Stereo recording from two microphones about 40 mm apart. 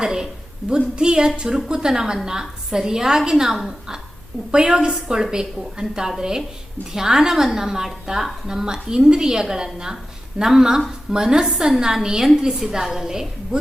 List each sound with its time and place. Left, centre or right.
0.0 s a sound: centre
0.6 s a woman's voice: centre
0.9 s a woman's voice: centre